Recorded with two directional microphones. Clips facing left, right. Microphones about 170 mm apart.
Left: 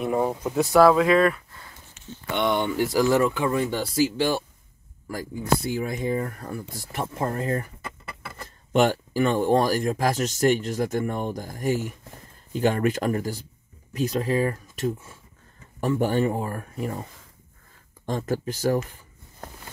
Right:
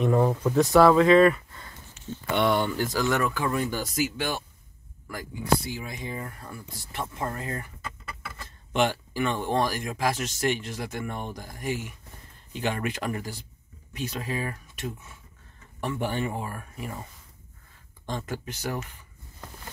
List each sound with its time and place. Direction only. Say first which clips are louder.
0.0 s speech: right 1 dB; 10° left (ahead or behind)
0.6 s speech: left 1 dB; centre (ahead or behind)
2.9 s speech: left 5 dB; 30° left (ahead or behind)
5.4 s speech: left 2 dB; 50° left (ahead or behind)
18.0 s speech: left 7 dB; 45° left (ahead or behind)